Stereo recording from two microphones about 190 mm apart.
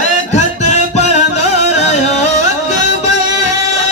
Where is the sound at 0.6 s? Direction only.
35° left (ahead or behind).